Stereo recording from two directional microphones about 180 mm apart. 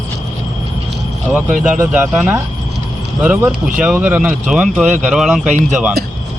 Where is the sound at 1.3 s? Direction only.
5° right (ahead or behind).